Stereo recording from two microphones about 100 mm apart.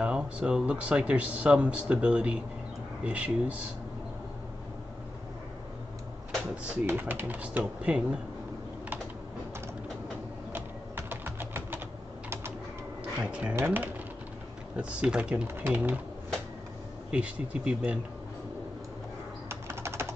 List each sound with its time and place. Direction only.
0.0 s speech: 10° right (ahead or behind)
6.9 s speech: 20° right (ahead or behind)
10.5 s a sound: 20° right (ahead or behind)
13.2 s speech: 10° right (ahead or behind)
14.8 s speech: 10° right (ahead or behind)
17.1 s speech: 10° right (ahead or behind)
19.5 s typing: 25° right (ahead or behind)